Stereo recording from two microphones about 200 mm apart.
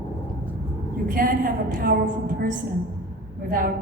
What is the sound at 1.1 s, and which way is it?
A woman's voice, 45° right (ahead or behind).